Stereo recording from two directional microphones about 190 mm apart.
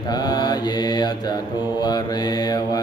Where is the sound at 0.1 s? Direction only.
20° left (ahead or behind).